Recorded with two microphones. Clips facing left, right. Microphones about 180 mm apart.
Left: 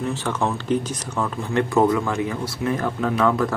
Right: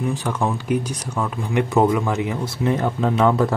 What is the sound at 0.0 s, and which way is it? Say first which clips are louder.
Speech: right 1 dB; 10° right (ahead or behind).